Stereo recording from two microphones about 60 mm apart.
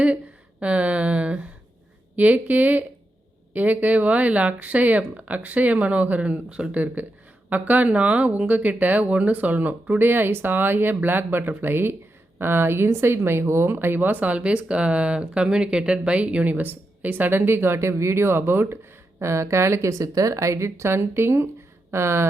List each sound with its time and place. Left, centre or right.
0.6 s speech: right
19.2 s speech: right
19.9 s speech: right